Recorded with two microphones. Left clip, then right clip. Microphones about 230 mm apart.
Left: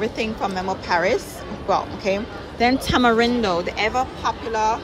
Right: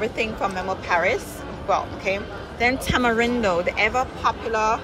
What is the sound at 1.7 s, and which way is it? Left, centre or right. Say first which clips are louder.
Speech: left 2 dB; centre.